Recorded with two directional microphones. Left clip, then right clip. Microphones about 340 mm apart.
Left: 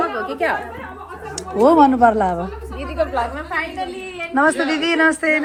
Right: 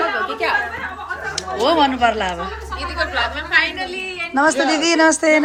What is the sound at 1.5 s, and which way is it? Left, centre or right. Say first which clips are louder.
Speech: left 4 dB; centre.